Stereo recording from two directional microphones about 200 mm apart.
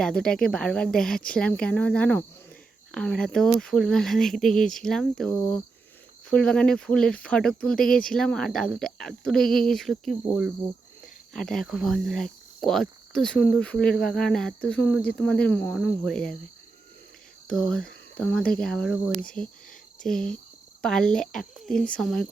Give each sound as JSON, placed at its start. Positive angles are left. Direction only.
{"t": 0.0, "sound": "speech", "side_deg": 5}
{"t": 17.5, "sound": "speech", "side_deg": 5}